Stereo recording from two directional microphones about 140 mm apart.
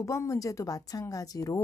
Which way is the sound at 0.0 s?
20° left (ahead or behind).